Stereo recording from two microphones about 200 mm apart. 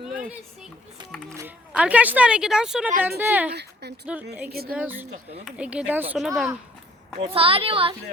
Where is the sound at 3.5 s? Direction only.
55° right (ahead or behind).